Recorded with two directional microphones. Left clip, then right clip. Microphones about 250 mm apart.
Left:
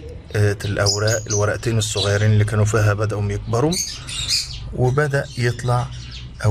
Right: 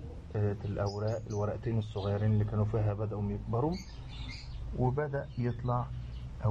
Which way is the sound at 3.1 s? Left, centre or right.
Left.